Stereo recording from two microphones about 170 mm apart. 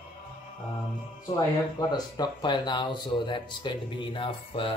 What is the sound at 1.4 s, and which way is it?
Speech, 20° left (ahead or behind).